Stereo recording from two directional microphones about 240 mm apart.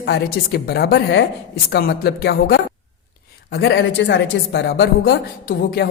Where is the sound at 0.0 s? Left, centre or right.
Left.